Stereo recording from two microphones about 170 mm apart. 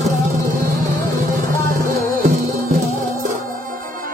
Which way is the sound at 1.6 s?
55° right (ahead or behind).